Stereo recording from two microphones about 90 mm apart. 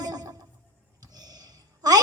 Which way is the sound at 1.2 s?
45° right (ahead or behind).